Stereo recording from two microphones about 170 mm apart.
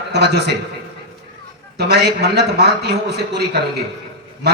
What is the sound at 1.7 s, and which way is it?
Speech, 70° right (ahead or behind).